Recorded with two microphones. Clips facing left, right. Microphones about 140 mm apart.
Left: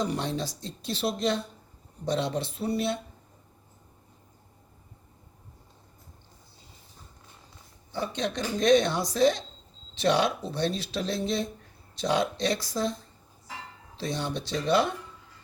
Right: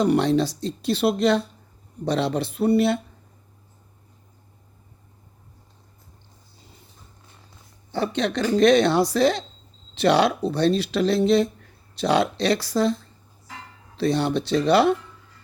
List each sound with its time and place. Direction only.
0.0 s speech: 70° right (ahead or behind)
7.9 s speech: 70° right (ahead or behind)